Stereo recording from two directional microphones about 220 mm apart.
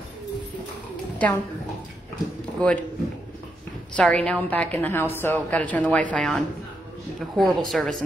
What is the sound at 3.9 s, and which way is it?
A woman's voice, 5° left (ahead or behind).